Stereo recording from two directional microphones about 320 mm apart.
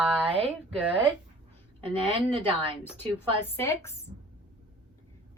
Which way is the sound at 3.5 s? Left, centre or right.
Centre.